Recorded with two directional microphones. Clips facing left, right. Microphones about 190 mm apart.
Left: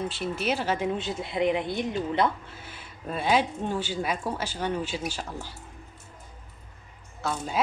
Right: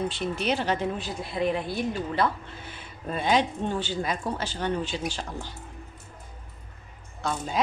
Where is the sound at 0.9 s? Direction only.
25° left (ahead or behind).